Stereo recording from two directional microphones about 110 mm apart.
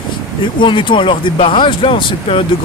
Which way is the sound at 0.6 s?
50° left (ahead or behind).